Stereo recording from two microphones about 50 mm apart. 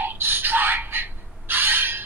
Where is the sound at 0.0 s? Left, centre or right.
Right.